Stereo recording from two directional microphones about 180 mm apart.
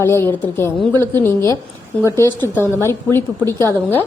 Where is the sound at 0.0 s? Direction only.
15° left (ahead or behind).